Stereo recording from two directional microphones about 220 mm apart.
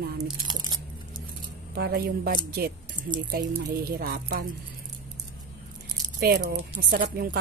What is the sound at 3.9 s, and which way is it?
Speech, 45° right (ahead or behind).